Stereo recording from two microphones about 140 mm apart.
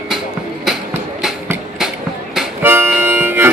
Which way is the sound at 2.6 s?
15° right (ahead or behind).